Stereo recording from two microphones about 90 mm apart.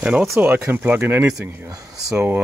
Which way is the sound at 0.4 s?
20° right (ahead or behind).